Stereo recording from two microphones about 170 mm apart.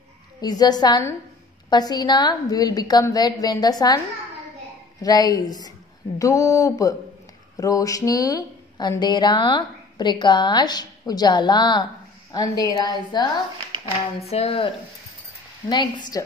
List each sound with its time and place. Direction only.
0.4 s speech: 25° left (ahead or behind)
5.0 s speech: 20° left (ahead or behind)
14.2 s speech: 35° left (ahead or behind)
15.7 s speech: 25° left (ahead or behind)